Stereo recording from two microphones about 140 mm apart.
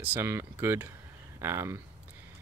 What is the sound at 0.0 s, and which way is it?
Speech, 15° right (ahead or behind).